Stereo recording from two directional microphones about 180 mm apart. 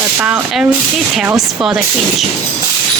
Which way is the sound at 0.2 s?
5° right (ahead or behind).